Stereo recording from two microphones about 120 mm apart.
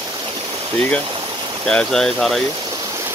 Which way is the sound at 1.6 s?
5° left (ahead or behind).